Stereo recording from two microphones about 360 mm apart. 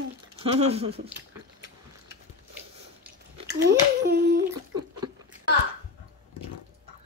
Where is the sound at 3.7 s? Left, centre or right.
Right.